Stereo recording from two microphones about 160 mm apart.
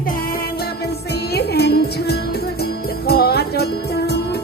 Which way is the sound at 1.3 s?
90° left.